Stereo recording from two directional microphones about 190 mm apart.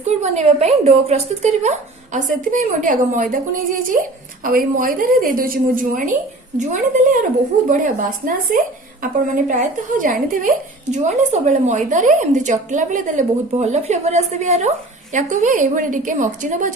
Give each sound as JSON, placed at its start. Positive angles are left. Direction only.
{"t": 0.0, "sound": "a woman's voice", "side_deg": -35}